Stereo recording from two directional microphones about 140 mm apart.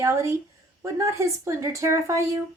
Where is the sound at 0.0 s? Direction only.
20° right (ahead or behind).